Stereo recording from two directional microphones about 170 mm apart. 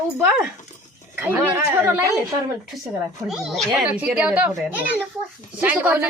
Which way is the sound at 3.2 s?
Centre (ahead or behind).